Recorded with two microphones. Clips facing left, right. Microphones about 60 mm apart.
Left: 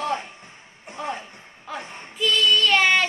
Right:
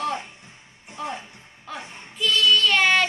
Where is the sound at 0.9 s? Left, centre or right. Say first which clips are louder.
Left 1 dB; left.